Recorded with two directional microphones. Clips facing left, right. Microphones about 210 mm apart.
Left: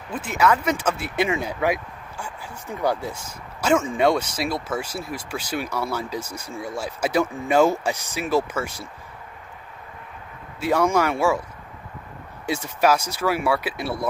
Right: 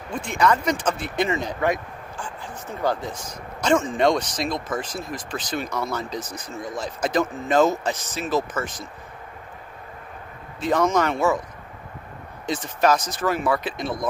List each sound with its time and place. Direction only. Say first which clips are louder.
0.1 s speech: even; 5° left (ahead or behind)
10.6 s speech: even; 10° left (ahead or behind)
12.4 s speech: even; 10° left (ahead or behind)